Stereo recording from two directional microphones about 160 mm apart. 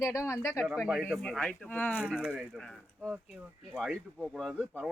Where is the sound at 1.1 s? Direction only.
5° left (ahead or behind).